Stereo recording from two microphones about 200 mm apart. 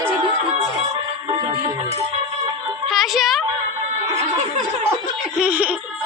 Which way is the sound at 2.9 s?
Centre (ahead or behind).